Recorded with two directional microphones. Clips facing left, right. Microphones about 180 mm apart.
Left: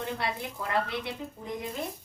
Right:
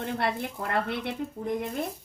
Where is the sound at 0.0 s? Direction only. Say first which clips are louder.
Right 4 dB; 55° right (ahead or behind).